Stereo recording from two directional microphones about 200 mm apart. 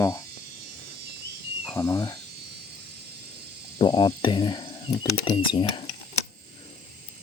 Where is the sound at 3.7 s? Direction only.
25° left (ahead or behind).